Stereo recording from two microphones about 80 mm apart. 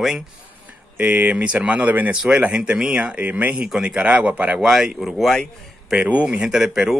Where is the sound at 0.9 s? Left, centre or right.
Centre.